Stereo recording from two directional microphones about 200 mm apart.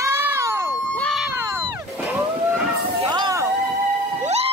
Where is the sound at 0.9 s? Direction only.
Centre (ahead or behind).